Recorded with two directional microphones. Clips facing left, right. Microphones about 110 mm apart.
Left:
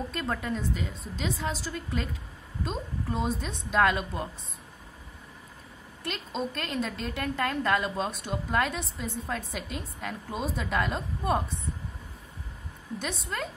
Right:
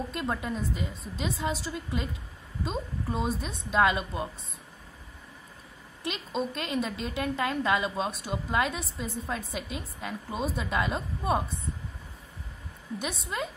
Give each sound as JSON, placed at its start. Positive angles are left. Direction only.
{"t": 0.1, "sound": "a woman's voice", "side_deg": -5}
{"t": 6.0, "sound": "a woman's voice", "side_deg": -5}
{"t": 13.0, "sound": "a woman's voice", "side_deg": -10}